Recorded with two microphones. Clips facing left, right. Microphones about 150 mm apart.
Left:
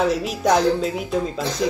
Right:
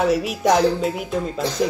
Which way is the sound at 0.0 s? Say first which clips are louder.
Right 1 dB; 5° right (ahead or behind).